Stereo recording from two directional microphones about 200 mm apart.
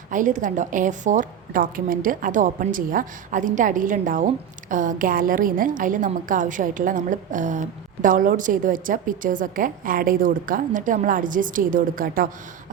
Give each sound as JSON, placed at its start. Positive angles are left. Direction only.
{"t": 0.1, "sound": "a woman's voice", "side_deg": -40}